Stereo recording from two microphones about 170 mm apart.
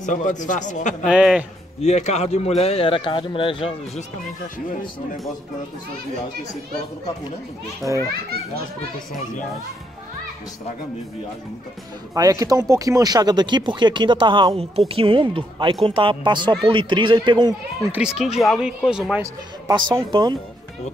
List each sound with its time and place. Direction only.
0.0 s speech: 45° left (ahead or behind)
1.0 s speech: 5° right (ahead or behind)
1.8 s speech: 40° left (ahead or behind)
7.8 s speech: centre (ahead or behind)
12.1 s speech: 20° right (ahead or behind)
17.9 s speech: 5° right (ahead or behind)
19.7 s speech: 25° right (ahead or behind)